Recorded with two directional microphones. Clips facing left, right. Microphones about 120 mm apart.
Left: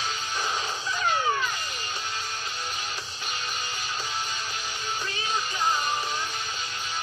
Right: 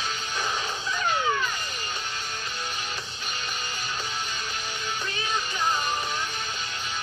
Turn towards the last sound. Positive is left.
turn(degrees=40)  # may be behind; listen again after turning